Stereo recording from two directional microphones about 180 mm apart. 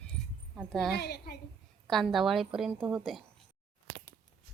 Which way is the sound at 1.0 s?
65° left (ahead or behind).